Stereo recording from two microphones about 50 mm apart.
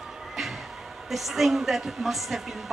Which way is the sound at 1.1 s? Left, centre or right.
Centre.